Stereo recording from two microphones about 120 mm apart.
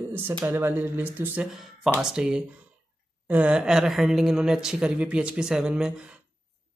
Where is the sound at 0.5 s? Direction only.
20° right (ahead or behind).